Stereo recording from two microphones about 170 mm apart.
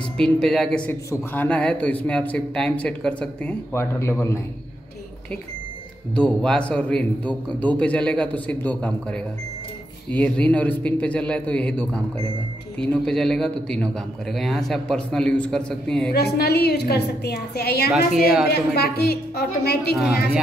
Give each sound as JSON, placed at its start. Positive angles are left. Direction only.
{"t": 0.2, "sound": "a man's voice", "side_deg": 5}
{"t": 6.1, "sound": "speech", "side_deg": 5}
{"t": 10.1, "sound": "a man's voice", "side_deg": 5}
{"t": 16.1, "sound": "a woman's voice", "side_deg": 70}